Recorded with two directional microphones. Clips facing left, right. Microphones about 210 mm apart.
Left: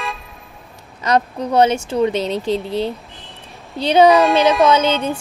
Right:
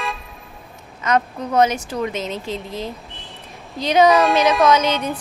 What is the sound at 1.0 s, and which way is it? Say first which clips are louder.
Speech: left 2 dB; 35° left (ahead or behind).